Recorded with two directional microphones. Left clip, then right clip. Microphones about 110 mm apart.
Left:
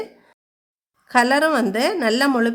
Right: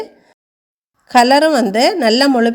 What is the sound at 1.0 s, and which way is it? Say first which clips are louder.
A woman's voice: right 7 dB; 35° right (ahead or behind).